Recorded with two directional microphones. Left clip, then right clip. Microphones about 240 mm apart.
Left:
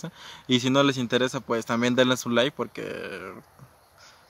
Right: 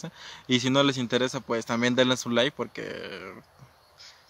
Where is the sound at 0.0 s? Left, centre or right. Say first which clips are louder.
Left 1 dB; centre.